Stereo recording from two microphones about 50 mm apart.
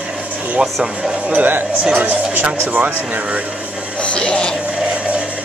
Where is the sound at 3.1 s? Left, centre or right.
Right.